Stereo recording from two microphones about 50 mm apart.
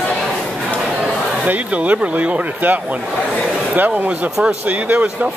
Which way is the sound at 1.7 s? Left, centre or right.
Right.